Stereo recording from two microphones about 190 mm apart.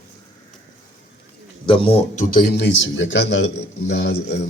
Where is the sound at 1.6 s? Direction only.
30° left (ahead or behind).